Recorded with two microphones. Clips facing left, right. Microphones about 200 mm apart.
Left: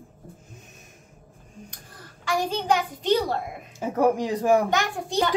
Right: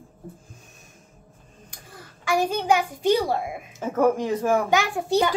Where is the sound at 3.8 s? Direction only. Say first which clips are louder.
Right 1 dB; 15° left (ahead or behind).